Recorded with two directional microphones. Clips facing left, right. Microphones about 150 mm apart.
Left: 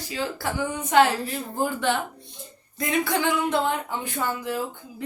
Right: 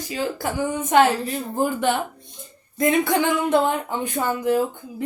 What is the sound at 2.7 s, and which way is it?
Speech, 20° right (ahead or behind).